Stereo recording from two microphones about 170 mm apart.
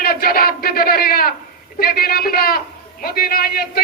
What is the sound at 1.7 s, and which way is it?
A man's voice, 60° left (ahead or behind).